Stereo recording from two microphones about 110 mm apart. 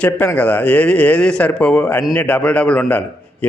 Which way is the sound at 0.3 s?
15° left (ahead or behind).